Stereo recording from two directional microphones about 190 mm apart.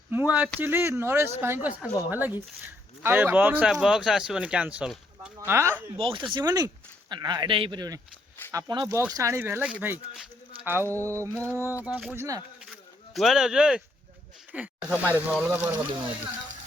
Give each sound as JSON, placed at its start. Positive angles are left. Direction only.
{"t": 0.1, "sound": "speech", "side_deg": -10}
{"t": 6.0, "sound": "speech", "side_deg": -30}
{"t": 10.8, "sound": "a sound", "side_deg": 10}
{"t": 11.1, "sound": "speech", "side_deg": -15}
{"t": 11.3, "sound": "a sound", "side_deg": 10}
{"t": 11.9, "sound": "speech", "side_deg": -10}
{"t": 13.1, "sound": "speech", "side_deg": 0}